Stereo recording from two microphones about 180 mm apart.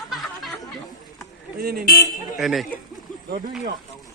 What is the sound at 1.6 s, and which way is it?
Speech, 55° right (ahead or behind).